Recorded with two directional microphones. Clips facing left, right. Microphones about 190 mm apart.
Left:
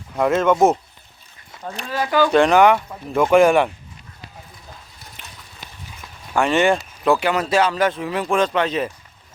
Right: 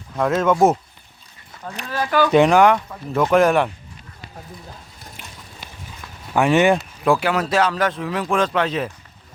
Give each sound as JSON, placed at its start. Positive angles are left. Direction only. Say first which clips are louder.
{"t": 0.2, "sound": "speech", "louder": "left 1 dB", "side_deg": 0}
{"t": 1.9, "sound": "speech", "louder": "left 1 dB", "side_deg": 15}
{"t": 2.3, "sound": "speech", "louder": "right 1 dB", "side_deg": -5}
{"t": 5.2, "sound": "horse", "louder": "right 1 dB", "side_deg": -10}
{"t": 6.3, "sound": "speech", "louder": "right 2 dB", "side_deg": -15}
{"t": 6.7, "sound": "speech", "louder": "even", "side_deg": 0}